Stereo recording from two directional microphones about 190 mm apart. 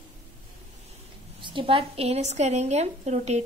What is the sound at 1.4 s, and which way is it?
A woman's voice, 25° right (ahead or behind).